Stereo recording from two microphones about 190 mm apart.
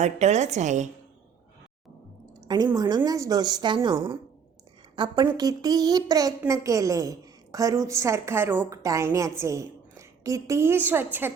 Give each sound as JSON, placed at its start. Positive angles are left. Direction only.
{"t": 0.0, "sound": "a woman's voice", "side_deg": -35}
{"t": 2.7, "sound": "a woman's voice", "side_deg": -20}